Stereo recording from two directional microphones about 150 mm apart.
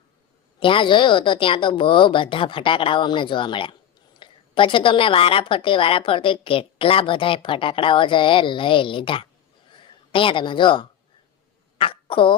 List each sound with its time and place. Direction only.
0.6 s a woman's voice: 35° left (ahead or behind)